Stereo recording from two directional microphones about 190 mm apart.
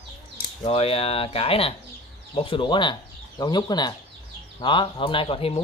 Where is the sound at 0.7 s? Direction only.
30° left (ahead or behind).